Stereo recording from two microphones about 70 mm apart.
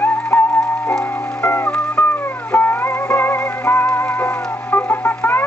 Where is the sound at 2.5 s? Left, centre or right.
Left.